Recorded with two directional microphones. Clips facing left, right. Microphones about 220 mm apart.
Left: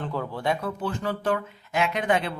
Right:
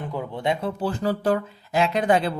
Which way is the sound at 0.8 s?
35° right (ahead or behind).